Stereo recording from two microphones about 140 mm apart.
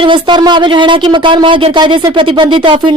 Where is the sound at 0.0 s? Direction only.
35° right (ahead or behind).